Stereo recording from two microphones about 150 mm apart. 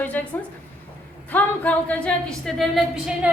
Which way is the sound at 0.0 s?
10° left (ahead or behind).